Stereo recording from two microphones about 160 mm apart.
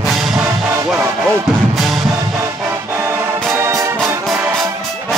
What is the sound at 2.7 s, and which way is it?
Music, 15° right (ahead or behind).